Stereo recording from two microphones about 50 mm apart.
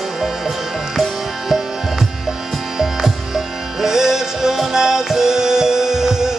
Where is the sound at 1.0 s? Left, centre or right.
Centre.